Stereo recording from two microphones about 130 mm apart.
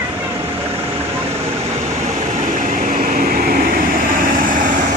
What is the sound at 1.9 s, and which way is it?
Vehicle, 60° right (ahead or behind).